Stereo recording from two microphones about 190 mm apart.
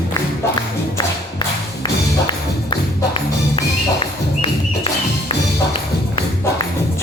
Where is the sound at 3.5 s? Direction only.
30° left (ahead or behind).